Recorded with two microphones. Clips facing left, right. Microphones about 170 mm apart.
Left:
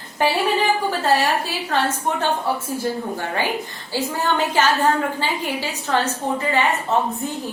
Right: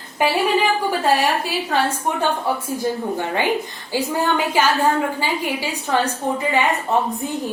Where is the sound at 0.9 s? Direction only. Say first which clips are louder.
Right 1 dB; 15° right (ahead or behind).